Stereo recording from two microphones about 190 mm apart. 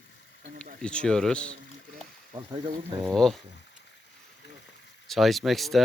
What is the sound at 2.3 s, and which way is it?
Speech, 25° right (ahead or behind).